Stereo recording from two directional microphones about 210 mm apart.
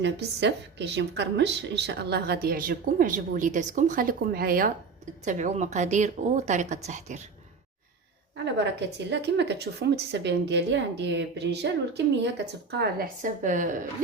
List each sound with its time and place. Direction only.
0.0 s a woman's voice: 55° right (ahead or behind); by 7.3 s 35° right (ahead or behind)
9.0 s a woman's voice: 55° right (ahead or behind)
12.8 s a woman's voice: 40° right (ahead or behind)